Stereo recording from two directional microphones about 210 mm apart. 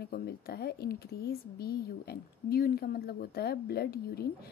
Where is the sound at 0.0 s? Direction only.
45° left (ahead or behind).